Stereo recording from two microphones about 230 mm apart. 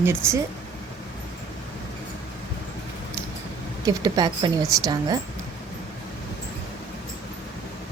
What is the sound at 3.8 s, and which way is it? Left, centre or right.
A woman's voice, centre.